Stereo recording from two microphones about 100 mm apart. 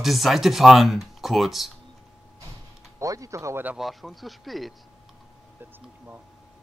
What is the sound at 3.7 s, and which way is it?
Speech, centre (ahead or behind).